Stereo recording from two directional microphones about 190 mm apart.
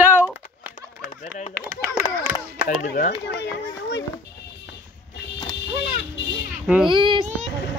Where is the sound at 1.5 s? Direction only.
50° right (ahead or behind).